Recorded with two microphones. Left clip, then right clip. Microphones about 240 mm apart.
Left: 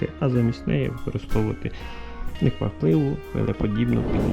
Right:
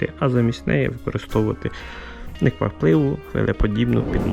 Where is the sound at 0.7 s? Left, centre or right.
Centre.